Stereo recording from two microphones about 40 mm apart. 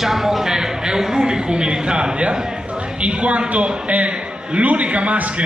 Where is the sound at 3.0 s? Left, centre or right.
Right.